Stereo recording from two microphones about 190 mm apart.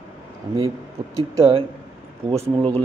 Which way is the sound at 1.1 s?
20° right (ahead or behind).